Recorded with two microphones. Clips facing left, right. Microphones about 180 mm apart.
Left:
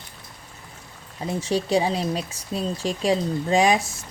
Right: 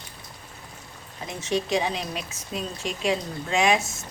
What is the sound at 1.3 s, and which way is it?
Speech, 35° left (ahead or behind).